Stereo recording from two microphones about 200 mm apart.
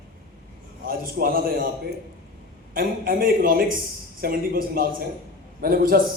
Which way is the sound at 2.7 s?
45° right (ahead or behind).